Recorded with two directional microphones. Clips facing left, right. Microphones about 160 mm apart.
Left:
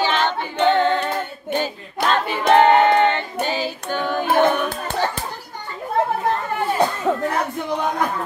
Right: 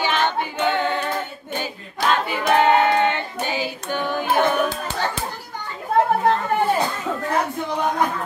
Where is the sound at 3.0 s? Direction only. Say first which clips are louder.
Left 3 dB; 15° right (ahead or behind).